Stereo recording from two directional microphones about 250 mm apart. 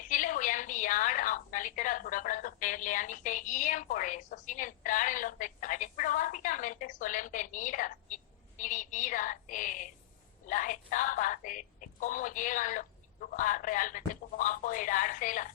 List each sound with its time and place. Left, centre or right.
0.1 s a woman's voice: left